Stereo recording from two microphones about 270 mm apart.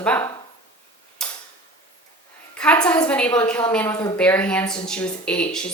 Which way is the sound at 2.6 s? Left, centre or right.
Centre.